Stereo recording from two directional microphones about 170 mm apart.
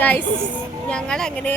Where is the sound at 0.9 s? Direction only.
5° left (ahead or behind).